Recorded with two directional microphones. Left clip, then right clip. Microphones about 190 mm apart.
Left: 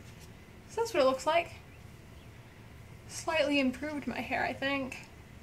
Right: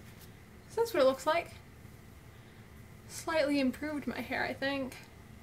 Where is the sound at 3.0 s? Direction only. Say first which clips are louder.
Left 1 dB; 10° right (ahead or behind).